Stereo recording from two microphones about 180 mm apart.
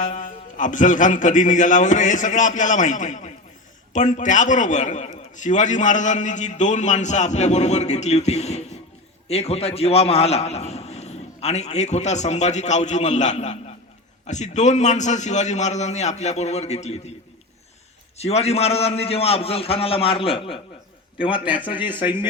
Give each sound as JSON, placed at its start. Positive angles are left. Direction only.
{"t": 0.0, "sound": "a man's voice", "side_deg": 45}
{"t": 18.2, "sound": "a man's voice", "side_deg": 35}